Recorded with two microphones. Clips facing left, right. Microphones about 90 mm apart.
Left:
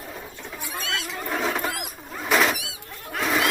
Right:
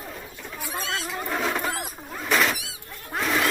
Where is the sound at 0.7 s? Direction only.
35° right (ahead or behind).